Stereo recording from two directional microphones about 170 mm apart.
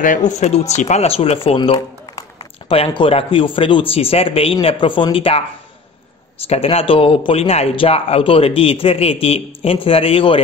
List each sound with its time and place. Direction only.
0.0 s speech: 50° left (ahead or behind); by 5.4 s 35° left (ahead or behind)
6.4 s speech: 35° left (ahead or behind)